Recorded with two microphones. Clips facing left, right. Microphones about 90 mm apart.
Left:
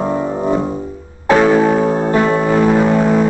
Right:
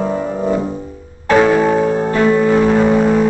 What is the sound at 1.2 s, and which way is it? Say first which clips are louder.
Music: left 1 dB; 5° left (ahead or behind).